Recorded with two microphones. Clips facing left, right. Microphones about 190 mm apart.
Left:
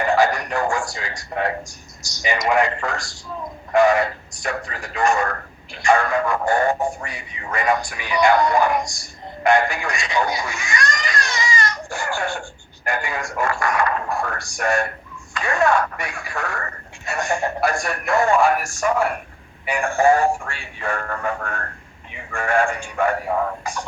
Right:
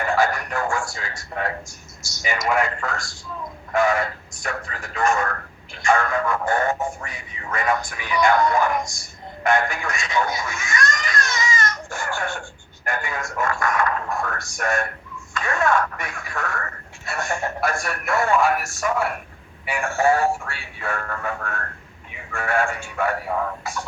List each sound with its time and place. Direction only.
0.0 s speech: 15° left (ahead or behind)